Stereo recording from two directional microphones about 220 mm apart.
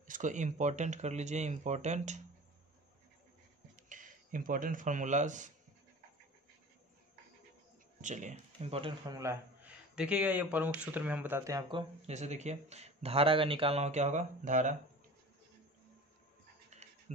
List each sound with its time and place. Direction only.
0.0 s speech: 35° right (ahead or behind)
3.7 s speech: 35° right (ahead or behind)
8.0 s a man's voice: 35° right (ahead or behind); by 11.8 s 15° right (ahead or behind)
12.1 s speech: 30° right (ahead or behind)